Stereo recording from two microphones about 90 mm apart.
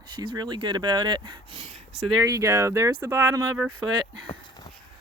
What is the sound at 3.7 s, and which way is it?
Speech, 60° right (ahead or behind).